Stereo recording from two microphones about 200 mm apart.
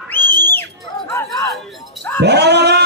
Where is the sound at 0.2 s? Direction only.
60° right (ahead or behind).